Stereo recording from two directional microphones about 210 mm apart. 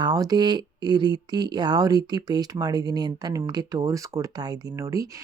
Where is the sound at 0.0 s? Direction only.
20° right (ahead or behind).